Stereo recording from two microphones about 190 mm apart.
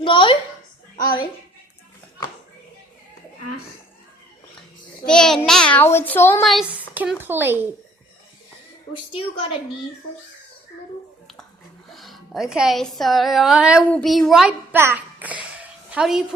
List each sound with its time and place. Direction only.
0.0 s a woman's voice: 25° left (ahead or behind)
5.0 s a child's voice: 5° left (ahead or behind)
6.4 s a child's voice: centre (ahead or behind)
11.9 s a woman's voice: centre (ahead or behind)